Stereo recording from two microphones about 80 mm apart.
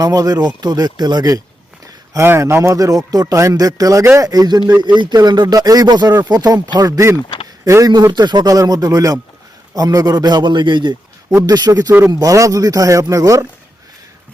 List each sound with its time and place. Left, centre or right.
0.0 s speech: right
2.1 s speech: right
2.7 s speech: right
11.4 s speech: right
11.9 s speech: right
12.1 s speech: right